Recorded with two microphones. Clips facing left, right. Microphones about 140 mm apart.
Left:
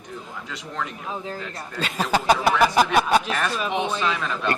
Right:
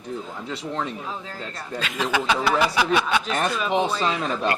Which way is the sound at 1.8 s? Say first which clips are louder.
Left 2 dB; 35° left (ahead or behind).